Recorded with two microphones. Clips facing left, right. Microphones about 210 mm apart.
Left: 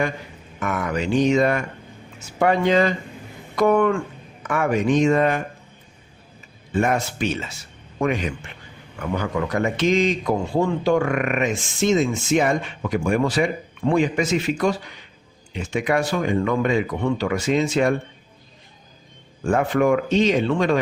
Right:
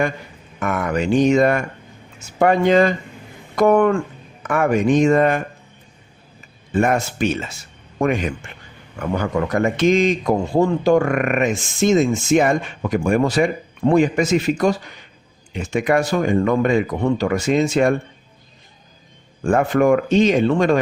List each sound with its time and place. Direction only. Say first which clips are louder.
0.6 s a man's voice: right 3 dB; 50° right (ahead or behind)
6.7 s a man's voice: right 3 dB; 50° right (ahead or behind)
19.5 s a man's voice: right 3 dB; 45° right (ahead or behind)